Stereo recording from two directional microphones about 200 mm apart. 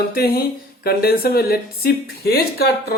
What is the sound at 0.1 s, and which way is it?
Speech, 50° left (ahead or behind).